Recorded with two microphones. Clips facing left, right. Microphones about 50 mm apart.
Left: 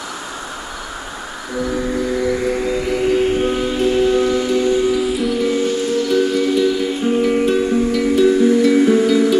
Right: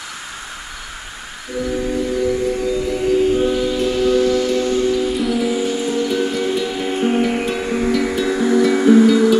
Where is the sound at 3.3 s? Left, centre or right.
Left.